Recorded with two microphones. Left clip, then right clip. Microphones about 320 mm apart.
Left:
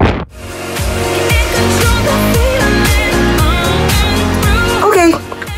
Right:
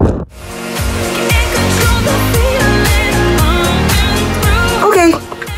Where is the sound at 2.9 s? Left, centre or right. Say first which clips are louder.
Even; centre.